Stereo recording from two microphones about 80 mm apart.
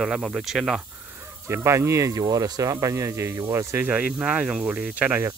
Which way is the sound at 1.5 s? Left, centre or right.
Right.